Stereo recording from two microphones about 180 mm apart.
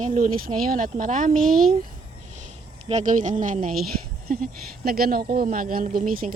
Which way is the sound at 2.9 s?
40° right (ahead or behind).